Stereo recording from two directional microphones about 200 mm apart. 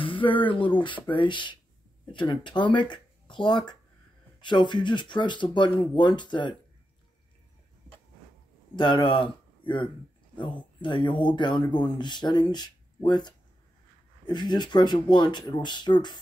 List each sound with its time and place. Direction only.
0.0 s speech: 25° left (ahead or behind)
8.7 s speech: 25° left (ahead or behind)